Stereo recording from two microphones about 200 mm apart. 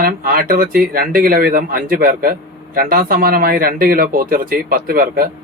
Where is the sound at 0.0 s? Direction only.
45° right (ahead or behind).